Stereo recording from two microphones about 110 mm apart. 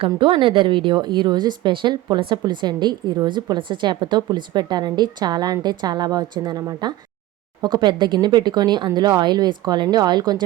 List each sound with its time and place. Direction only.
0.2 s a woman's voice: 50° right (ahead or behind)